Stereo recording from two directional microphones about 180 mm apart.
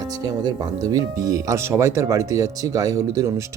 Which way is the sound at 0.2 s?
20° right (ahead or behind).